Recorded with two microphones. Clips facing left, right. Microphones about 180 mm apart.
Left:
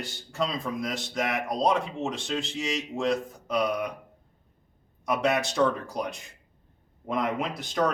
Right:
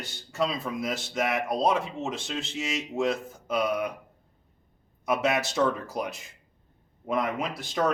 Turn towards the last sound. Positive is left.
turn(degrees=0)  # may be behind; listen again after turning